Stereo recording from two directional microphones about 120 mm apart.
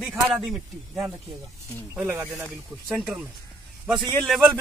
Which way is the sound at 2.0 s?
25° right (ahead or behind).